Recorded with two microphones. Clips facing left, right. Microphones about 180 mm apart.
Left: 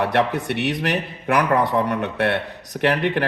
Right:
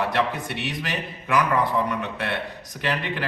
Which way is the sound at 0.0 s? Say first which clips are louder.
Left 4 dB; 65° left (ahead or behind).